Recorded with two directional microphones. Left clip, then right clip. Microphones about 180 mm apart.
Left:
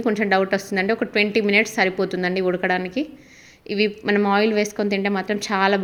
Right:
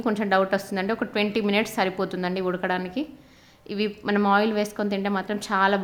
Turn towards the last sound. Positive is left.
turn(degrees=10)  # may be behind; listen again after turning